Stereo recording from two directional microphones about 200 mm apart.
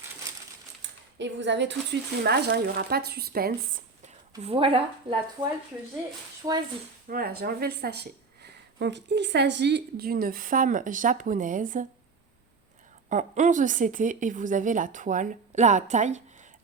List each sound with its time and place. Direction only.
1.2 s a woman's voice: 65° right (ahead or behind)
4.0 s speech: 30° right (ahead or behind)
7.1 s a woman's voice: 50° right (ahead or behind)
13.1 s a woman's voice: 35° right (ahead or behind)